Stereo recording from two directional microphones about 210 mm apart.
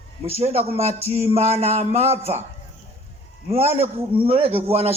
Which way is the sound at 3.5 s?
30° right (ahead or behind).